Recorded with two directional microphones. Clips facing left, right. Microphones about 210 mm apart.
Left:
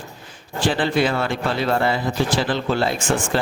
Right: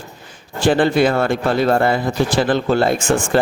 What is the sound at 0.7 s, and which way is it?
Speech, 45° right (ahead or behind).